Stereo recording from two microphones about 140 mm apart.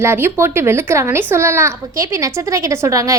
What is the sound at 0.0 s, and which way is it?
A woman's voice, 20° right (ahead or behind).